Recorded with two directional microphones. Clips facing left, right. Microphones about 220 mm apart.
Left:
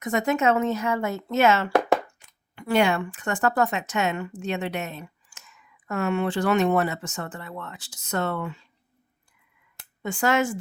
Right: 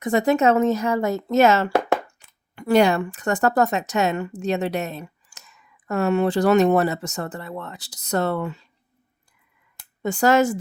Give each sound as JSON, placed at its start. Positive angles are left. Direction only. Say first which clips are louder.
{"t": 0.0, "sound": "speech", "louder": "right 5 dB", "side_deg": -35}
{"t": 10.0, "sound": "speech", "louder": "right 5 dB", "side_deg": -40}